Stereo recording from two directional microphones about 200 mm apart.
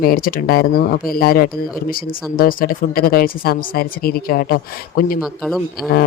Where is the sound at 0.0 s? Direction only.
45° left (ahead or behind).